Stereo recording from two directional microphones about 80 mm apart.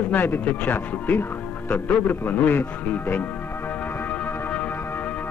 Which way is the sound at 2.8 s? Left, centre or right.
Left.